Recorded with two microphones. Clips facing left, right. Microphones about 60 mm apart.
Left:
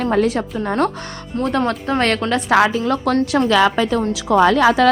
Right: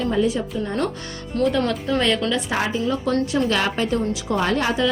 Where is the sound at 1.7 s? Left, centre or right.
Left.